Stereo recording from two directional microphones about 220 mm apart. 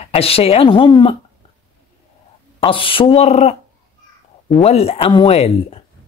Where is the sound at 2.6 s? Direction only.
25° left (ahead or behind).